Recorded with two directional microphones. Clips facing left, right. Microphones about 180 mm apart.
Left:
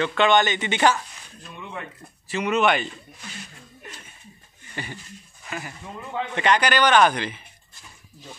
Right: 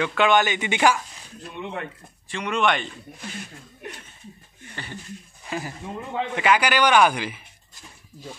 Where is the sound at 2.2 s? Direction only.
5° left (ahead or behind).